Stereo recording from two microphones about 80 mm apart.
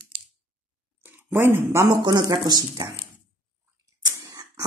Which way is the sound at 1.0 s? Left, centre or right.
Right.